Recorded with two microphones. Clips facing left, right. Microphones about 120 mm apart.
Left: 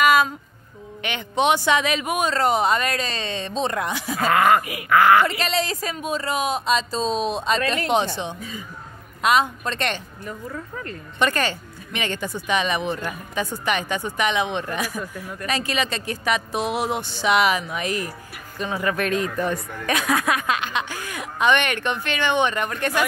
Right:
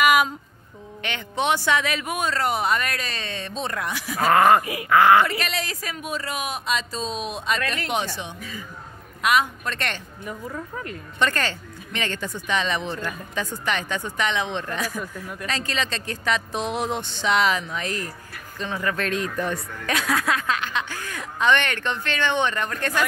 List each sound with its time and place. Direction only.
0.0 s a sound: 15° right (ahead or behind)
1.0 s speech: 15° left (ahead or behind)
4.3 s speech: 30° right (ahead or behind)
5.2 s speech: 25° left (ahead or behind)
10.2 s speech: 10° right (ahead or behind)
11.1 s speech: 15° left (ahead or behind)